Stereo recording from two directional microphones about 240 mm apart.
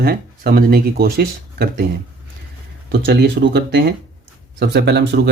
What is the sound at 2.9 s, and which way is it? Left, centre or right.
Speech, right.